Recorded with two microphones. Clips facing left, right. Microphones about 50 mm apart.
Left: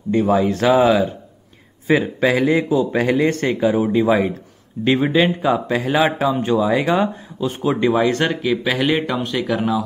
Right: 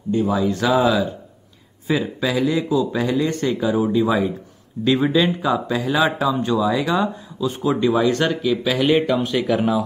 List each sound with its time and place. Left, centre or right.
0.1 s a man's voice: left
3.6 s speech: left
4.8 s speech: left
5.9 s speech: left
8.8 s speech: centre